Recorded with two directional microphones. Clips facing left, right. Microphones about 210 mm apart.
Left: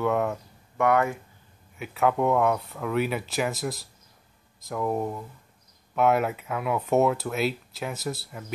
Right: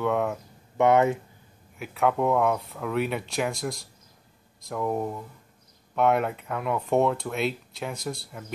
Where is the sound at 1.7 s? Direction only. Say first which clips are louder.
Even; centre (ahead or behind).